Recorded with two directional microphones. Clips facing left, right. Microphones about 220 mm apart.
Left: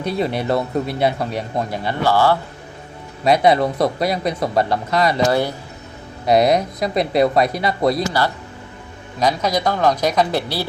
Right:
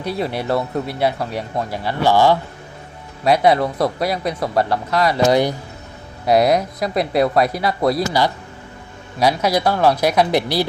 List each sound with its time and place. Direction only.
0.0 s speech: 10° right (ahead or behind)
0.4 s speech: 15° left (ahead or behind)
2.0 s speech: 15° right (ahead or behind)
4.5 s speech: 15° left (ahead or behind)
5.3 s speech: 15° right (ahead or behind)
6.2 s speech: 5° right (ahead or behind)